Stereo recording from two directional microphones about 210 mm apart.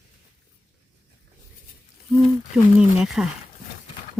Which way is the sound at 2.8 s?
5° right (ahead or behind).